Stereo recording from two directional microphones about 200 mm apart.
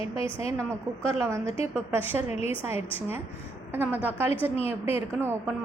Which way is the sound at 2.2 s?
30° left (ahead or behind).